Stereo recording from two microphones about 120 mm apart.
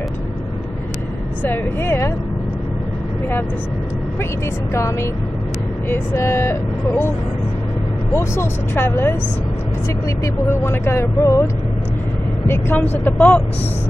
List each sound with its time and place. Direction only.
1.4 s speech: 15° left (ahead or behind)
5.9 s speech: 25° left (ahead or behind)
8.1 s speech: 20° left (ahead or behind)
10.2 s speech: 20° left (ahead or behind)
12.4 s speech: 15° left (ahead or behind)